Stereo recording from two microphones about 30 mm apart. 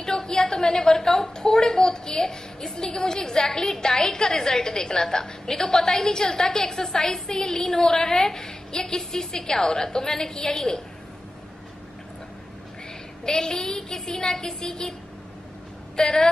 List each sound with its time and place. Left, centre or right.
0.0 s a woman's voice: left
13.2 s a woman's voice: left
16.0 s a woman's voice: left